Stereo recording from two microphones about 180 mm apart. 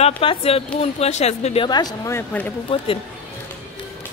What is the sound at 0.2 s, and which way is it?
Speech, 30° left (ahead or behind).